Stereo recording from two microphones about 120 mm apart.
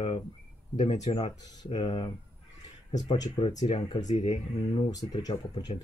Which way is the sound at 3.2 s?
45° left (ahead or behind).